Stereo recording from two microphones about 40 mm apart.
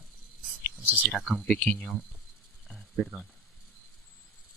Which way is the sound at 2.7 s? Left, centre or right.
Centre.